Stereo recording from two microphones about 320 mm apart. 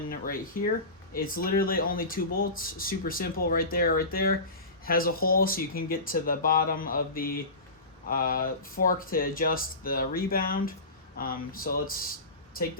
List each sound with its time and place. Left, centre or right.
0.1 s speech: left